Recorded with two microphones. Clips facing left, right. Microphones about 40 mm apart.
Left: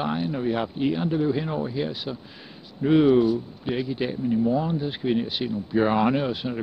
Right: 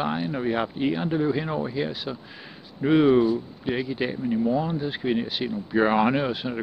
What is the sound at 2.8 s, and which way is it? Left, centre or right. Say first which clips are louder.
A woman's voice: even; centre.